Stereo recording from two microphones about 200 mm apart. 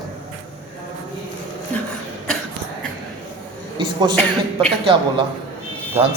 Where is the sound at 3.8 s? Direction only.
25° right (ahead or behind).